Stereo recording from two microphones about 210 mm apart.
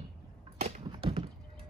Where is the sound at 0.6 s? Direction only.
30° right (ahead or behind).